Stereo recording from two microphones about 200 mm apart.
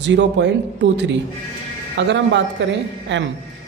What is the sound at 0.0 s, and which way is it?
A man's voice, 60° right (ahead or behind).